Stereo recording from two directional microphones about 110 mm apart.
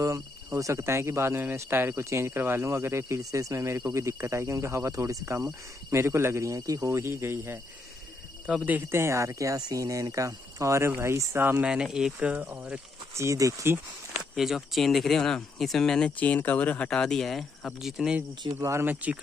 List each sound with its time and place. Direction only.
0.0 s speech: 30° right (ahead or behind)
8.5 s speech: 10° right (ahead or behind)
11.6 s speech: 5° right (ahead or behind)
13.1 s speech: 25° right (ahead or behind)
14.3 s speech: 5° right (ahead or behind)
18.4 s speech: 30° right (ahead or behind)